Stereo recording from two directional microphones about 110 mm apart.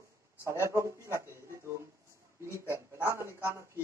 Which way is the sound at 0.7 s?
25° right (ahead or behind).